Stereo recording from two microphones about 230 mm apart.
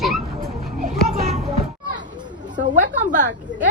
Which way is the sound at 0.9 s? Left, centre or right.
Centre.